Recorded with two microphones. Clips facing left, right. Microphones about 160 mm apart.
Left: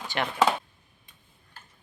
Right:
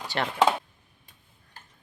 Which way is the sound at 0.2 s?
35° right (ahead or behind).